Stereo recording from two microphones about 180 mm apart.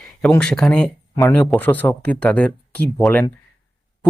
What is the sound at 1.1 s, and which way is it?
Speech, 20° left (ahead or behind).